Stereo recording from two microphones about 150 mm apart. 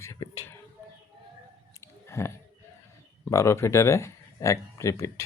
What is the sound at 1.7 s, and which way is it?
Chewing, 20° left (ahead or behind).